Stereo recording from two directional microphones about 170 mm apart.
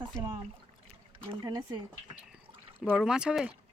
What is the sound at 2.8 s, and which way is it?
Speech, 5° right (ahead or behind).